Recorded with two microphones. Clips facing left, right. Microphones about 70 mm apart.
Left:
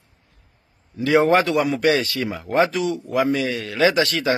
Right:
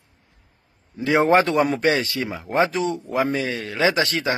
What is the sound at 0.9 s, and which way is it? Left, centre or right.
A man's voice, right.